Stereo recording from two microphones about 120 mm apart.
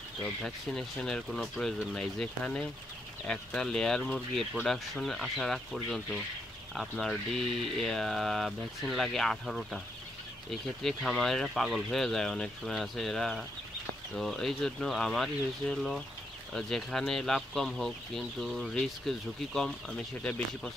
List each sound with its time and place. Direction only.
0.2 s speech: 5° left (ahead or behind)